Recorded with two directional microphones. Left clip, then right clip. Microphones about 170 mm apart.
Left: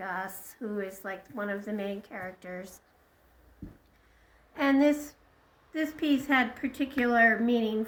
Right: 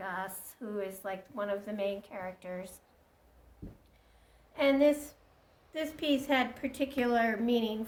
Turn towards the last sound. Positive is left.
turn(degrees=0)  # may be behind; listen again after turning